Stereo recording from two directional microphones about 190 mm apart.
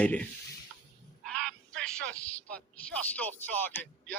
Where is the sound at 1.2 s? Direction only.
5° left (ahead or behind).